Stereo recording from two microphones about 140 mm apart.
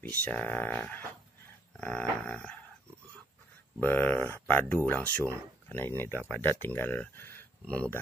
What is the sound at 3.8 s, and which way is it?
Speech, 15° left (ahead or behind).